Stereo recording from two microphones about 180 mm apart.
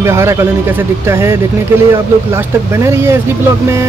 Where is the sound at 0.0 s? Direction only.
15° right (ahead or behind).